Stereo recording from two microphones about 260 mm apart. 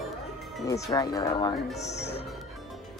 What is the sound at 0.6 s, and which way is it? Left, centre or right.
Speech, centre.